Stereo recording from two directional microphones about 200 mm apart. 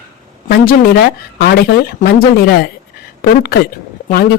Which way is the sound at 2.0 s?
50° left (ahead or behind).